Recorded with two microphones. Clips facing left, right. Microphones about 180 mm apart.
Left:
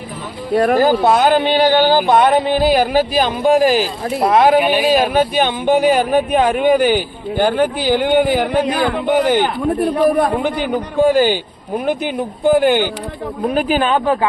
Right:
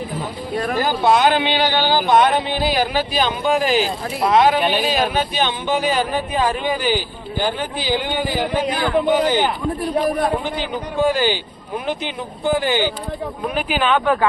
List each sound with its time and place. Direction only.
0.8 s speech: 40° left (ahead or behind)
4.6 s speech: 10° left (ahead or behind)
5.1 s speech: 50° left (ahead or behind)
13.5 s speech: 40° left (ahead or behind)